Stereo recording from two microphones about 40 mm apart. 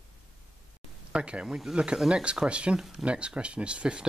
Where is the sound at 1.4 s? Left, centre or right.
Centre.